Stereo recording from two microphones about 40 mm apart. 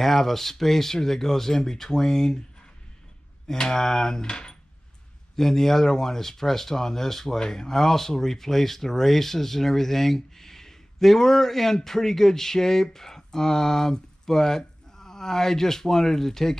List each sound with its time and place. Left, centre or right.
0.0 s speech: centre
3.4 s speech: centre
5.3 s speech: centre